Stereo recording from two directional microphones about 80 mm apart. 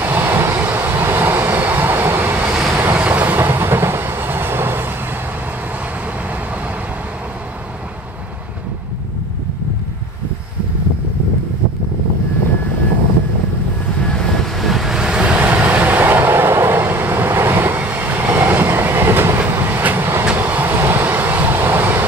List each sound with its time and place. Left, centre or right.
0.0 s vehicle: right
2.5 s vehicle: centre
2.8 s train: right
14.1 s vehicle: centre; by 22.0 s right